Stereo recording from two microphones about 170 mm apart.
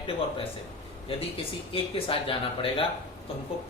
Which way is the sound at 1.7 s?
30° left (ahead or behind).